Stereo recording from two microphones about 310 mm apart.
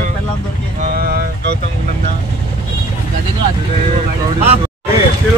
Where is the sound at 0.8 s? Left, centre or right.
Right.